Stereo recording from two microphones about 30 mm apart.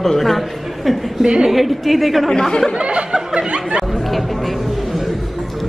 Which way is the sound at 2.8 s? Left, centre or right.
Right.